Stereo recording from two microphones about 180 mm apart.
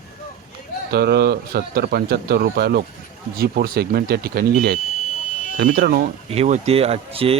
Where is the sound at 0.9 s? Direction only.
65° right (ahead or behind).